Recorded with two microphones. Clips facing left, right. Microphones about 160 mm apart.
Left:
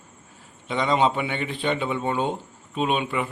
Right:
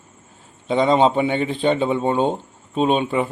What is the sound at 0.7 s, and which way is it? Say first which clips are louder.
A man's voice: right 6 dB; 30° right (ahead or behind).